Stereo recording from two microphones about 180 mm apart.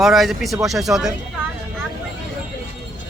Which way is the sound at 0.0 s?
Centre (ahead or behind).